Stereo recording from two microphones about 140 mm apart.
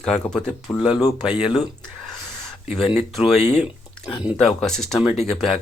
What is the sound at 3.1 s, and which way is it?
Speech, centre (ahead or behind).